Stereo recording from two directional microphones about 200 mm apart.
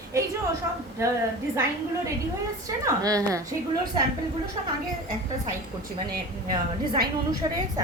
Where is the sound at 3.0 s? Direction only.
15° right (ahead or behind).